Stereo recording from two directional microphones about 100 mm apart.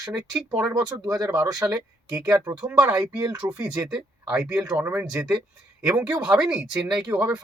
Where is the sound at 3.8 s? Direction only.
25° right (ahead or behind).